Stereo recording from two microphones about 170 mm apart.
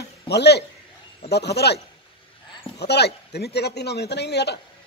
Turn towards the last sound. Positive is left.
turn(degrees=80)